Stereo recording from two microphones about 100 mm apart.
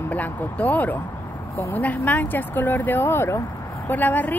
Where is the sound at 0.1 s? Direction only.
15° left (ahead or behind).